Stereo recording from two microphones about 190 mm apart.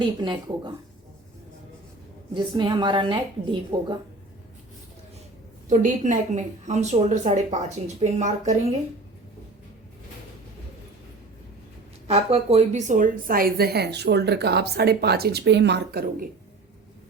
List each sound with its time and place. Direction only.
0.0 s a woman's voice: 25° right (ahead or behind)
2.3 s a woman's voice: 25° right (ahead or behind)
5.6 s a woman's voice: 40° right (ahead or behind)
12.0 s a woman's voice: 35° right (ahead or behind); by 16.3 s 55° right (ahead or behind)